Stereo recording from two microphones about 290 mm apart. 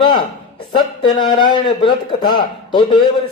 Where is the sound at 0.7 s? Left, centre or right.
Centre.